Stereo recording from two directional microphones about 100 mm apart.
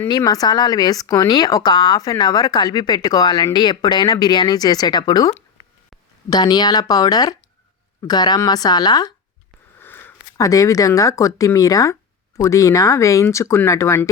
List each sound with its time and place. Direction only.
0.3 s speech: 40° left (ahead or behind)
6.3 s speech: 45° left (ahead or behind)
9.8 s a sound: 20° left (ahead or behind)
10.3 s speech: 35° left (ahead or behind)